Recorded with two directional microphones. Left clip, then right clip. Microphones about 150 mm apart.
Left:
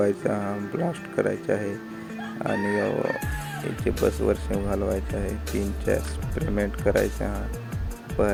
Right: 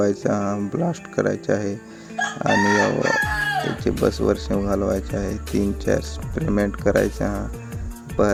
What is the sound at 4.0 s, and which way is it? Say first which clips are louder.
Speech: right 3 dB; 55° left (ahead or behind).